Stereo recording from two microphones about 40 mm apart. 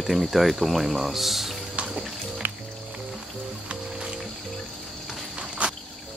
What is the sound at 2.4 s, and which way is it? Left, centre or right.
Music, right.